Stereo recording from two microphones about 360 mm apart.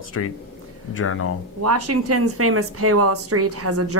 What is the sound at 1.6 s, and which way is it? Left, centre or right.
Speech, right.